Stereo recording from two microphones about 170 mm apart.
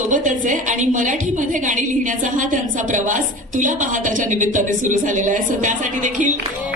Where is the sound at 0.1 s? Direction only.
50° right (ahead or behind).